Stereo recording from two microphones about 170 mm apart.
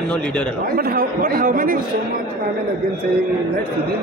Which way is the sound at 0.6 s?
60° right (ahead or behind).